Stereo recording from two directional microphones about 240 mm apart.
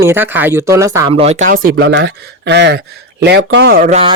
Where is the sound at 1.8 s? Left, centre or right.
Right.